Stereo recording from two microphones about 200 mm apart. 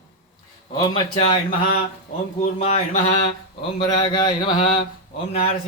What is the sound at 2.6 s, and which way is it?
Mantra, 30° left (ahead or behind).